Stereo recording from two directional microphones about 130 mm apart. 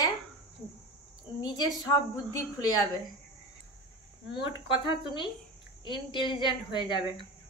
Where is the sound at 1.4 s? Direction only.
30° left (ahead or behind).